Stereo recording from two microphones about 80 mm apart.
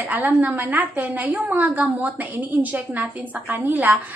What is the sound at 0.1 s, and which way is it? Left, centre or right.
A woman's voice, centre.